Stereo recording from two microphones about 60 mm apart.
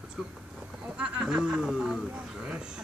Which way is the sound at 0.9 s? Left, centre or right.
Right.